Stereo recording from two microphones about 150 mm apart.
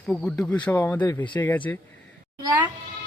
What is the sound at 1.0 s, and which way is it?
Speech, 25° left (ahead or behind).